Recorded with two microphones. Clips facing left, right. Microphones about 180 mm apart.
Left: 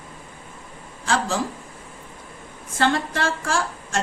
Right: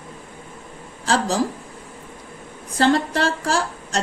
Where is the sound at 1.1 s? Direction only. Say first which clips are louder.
Right 3 dB; 40° right (ahead or behind).